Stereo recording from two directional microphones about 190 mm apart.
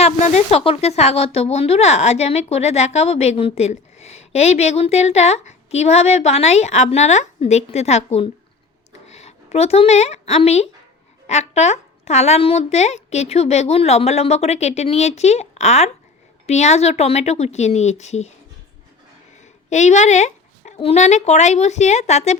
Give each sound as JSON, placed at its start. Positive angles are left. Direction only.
{"t": 0.0, "sound": "speech", "side_deg": 35}
{"t": 8.9, "sound": "a sound", "side_deg": 35}
{"t": 11.3, "sound": "speech", "side_deg": 35}
{"t": 19.7, "sound": "speech", "side_deg": 35}